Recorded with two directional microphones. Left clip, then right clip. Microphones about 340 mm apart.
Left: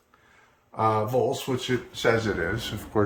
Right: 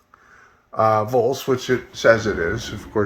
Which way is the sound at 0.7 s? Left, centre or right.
Centre.